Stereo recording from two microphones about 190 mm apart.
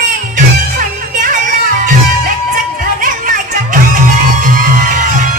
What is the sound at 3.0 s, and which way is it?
Music, 45° right (ahead or behind).